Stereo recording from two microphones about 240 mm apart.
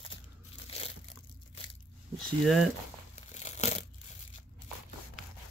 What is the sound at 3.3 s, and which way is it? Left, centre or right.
Crumpling, left.